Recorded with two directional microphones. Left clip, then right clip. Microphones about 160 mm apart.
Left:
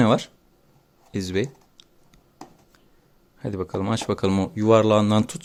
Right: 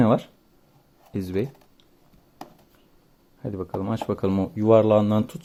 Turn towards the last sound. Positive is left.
turn(degrees=5)  # may be behind; listen again after turning